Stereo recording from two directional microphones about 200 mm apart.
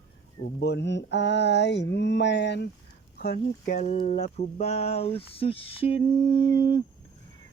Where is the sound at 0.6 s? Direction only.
60° left (ahead or behind).